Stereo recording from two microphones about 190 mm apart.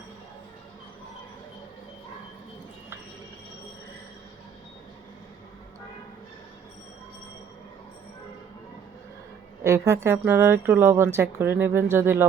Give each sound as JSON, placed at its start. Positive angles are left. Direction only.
{"t": 9.6, "sound": "speech", "side_deg": -15}